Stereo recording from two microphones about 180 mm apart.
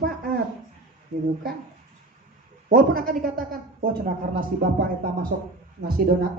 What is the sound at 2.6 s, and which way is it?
Speech, 55° right (ahead or behind).